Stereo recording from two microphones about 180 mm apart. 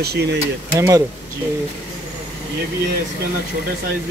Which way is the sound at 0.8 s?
15° right (ahead or behind).